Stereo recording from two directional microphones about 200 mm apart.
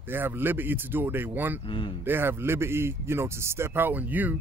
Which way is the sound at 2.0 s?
10° right (ahead or behind).